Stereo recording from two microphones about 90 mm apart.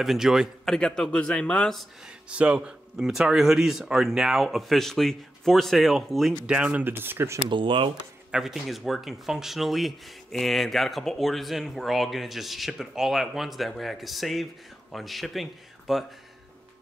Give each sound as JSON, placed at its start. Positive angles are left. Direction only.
{"t": 0.0, "sound": "speech", "side_deg": -5}
{"t": 0.7, "sound": "a man's voice", "side_deg": 10}
{"t": 2.0, "sound": "speech", "side_deg": -10}
{"t": 3.0, "sound": "speech", "side_deg": -5}
{"t": 6.5, "sound": "speech", "side_deg": -15}
{"t": 7.4, "sound": "speech", "side_deg": -65}
{"t": 8.3, "sound": "speech", "side_deg": -5}